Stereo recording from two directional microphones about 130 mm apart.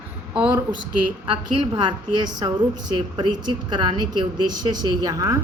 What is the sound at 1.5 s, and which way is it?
A woman's voice, 35° right (ahead or behind).